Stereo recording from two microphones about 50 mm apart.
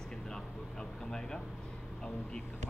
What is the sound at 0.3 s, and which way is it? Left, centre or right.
Vehicle, centre.